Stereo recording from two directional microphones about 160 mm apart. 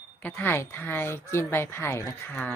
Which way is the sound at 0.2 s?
10° left (ahead or behind).